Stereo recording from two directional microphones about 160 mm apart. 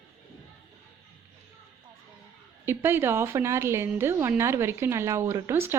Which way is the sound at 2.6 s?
15° right (ahead or behind).